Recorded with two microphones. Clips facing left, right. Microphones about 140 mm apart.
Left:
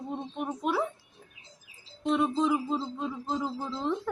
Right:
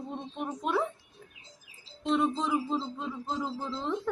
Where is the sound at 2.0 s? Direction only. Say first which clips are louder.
Left 2 dB; centre (ahead or behind).